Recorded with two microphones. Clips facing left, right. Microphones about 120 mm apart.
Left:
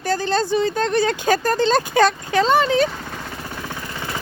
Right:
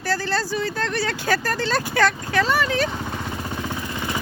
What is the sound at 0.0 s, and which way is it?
Speech, 20° left (ahead or behind).